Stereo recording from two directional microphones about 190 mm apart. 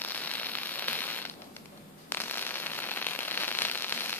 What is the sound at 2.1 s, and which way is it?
Fireworks, 10° left (ahead or behind).